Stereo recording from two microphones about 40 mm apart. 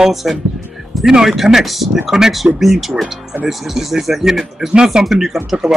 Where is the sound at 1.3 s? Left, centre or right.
Centre.